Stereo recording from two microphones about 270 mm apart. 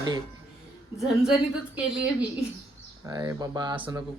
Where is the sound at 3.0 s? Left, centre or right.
Centre.